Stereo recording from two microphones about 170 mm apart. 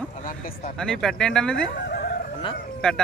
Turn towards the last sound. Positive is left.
turn(degrees=5)  # may be behind; listen again after turning